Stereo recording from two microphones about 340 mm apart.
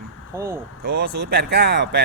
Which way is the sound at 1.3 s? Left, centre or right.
Right.